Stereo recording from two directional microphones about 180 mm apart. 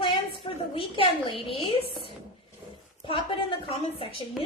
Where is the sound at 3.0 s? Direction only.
30° left (ahead or behind).